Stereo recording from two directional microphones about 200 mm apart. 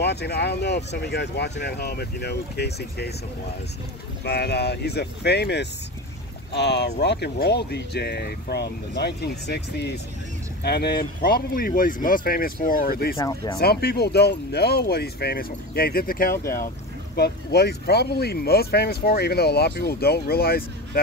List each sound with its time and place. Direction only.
0.0 s speech: 55° left (ahead or behind)
4.2 s speech: 55° left (ahead or behind)
13.2 s speech: 15° left (ahead or behind)
13.6 s speech: 50° left (ahead or behind)